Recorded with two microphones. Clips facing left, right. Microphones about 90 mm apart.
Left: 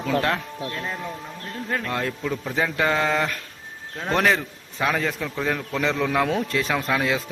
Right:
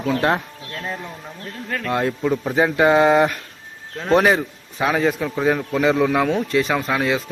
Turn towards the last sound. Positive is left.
turn(degrees=0)  # may be behind; listen again after turning